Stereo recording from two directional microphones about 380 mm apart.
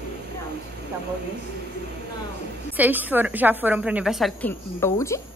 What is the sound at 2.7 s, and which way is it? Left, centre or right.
A woman's voice, centre.